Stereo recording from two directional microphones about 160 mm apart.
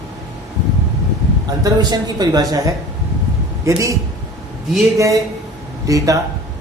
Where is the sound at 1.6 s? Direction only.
25° right (ahead or behind).